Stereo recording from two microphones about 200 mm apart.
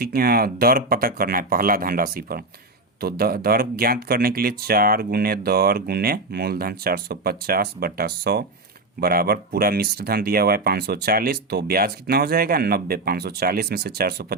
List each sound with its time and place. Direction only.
0.0 s speech: 50° right (ahead or behind)